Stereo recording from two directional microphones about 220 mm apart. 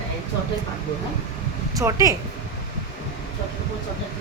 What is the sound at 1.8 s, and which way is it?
Speech, 15° right (ahead or behind).